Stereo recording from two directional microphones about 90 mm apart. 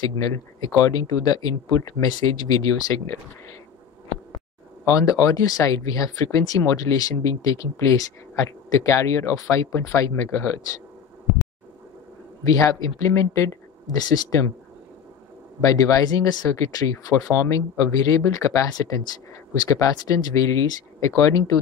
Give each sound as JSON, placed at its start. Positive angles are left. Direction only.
{"t": 0.0, "sound": "speech", "side_deg": 45}
{"t": 4.8, "sound": "speech", "side_deg": 40}
{"t": 12.4, "sound": "speech", "side_deg": 40}
{"t": 15.6, "sound": "speech", "side_deg": 40}